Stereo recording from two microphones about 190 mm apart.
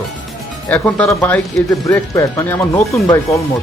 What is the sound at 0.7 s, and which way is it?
Speech, 10° left (ahead or behind).